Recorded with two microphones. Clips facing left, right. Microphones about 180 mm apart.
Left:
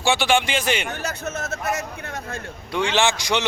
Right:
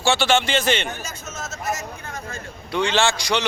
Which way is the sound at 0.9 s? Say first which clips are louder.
Left 6 dB; 65° left (ahead or behind).